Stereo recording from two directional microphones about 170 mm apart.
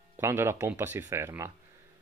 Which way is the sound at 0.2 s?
15° right (ahead or behind).